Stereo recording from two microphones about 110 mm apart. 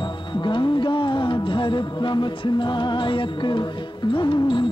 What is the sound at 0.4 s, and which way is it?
Music, 45° left (ahead or behind).